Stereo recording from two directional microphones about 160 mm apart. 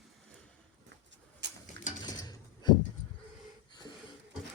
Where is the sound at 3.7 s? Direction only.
25° left (ahead or behind).